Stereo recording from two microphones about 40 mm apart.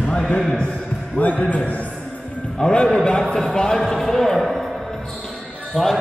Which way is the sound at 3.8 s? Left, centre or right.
Centre.